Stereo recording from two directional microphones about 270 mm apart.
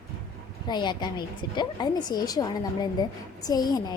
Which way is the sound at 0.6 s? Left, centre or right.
Centre.